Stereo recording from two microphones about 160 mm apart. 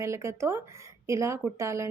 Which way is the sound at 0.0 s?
20° right (ahead or behind).